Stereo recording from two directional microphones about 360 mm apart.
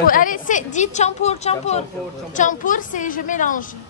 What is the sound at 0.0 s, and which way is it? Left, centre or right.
A woman's voice, left.